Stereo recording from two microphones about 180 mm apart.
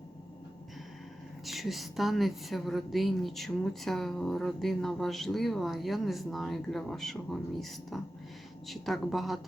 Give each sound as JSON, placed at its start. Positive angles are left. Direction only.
{"t": 1.5, "sound": "a woman's voice", "side_deg": 0}